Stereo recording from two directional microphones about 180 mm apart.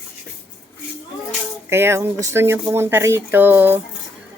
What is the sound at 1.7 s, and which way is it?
A woman's voice, 15° right (ahead or behind).